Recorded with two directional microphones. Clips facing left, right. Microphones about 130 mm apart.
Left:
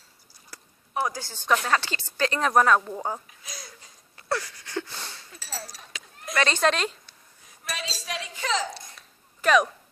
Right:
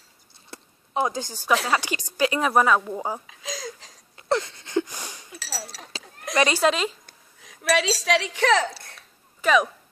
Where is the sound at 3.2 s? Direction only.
90° right.